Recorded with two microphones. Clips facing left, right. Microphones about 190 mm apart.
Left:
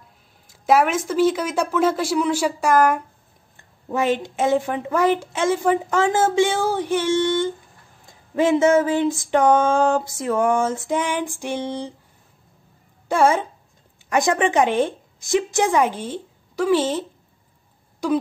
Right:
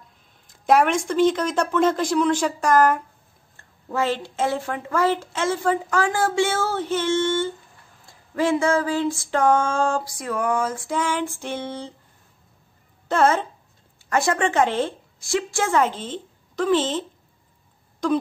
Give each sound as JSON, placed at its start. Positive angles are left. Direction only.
{"t": 0.5, "sound": "a woman's voice", "side_deg": 5}
{"t": 8.1, "sound": "a sound", "side_deg": 20}
{"t": 13.1, "sound": "a woman's voice", "side_deg": 10}
{"t": 18.0, "sound": "a woman's voice", "side_deg": 10}